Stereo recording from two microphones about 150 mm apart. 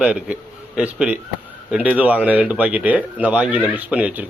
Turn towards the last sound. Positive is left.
turn(degrees=-10)  # may be behind; listen again after turning